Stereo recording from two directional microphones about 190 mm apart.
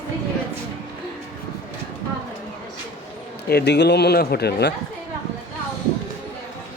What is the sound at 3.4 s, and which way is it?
Speech, 60° left (ahead or behind).